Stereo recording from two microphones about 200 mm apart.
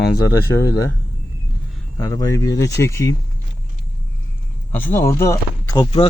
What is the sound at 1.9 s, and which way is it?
Speech, 15° left (ahead or behind).